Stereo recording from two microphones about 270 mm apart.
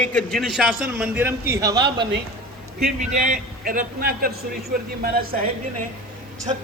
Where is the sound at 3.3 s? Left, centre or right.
Right.